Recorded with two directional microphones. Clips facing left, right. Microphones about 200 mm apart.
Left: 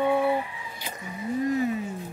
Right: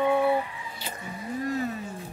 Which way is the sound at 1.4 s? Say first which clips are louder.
Left 4 dB; 15° left (ahead or behind).